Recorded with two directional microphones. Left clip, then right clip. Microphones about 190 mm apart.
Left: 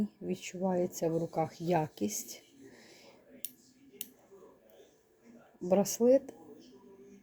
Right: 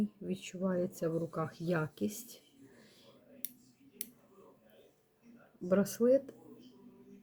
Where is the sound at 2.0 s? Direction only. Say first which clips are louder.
Left 3 dB; 15° right (ahead or behind).